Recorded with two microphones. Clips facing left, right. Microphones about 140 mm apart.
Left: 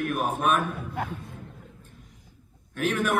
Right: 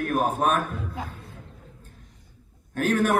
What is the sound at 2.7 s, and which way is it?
Speech, 40° right (ahead or behind).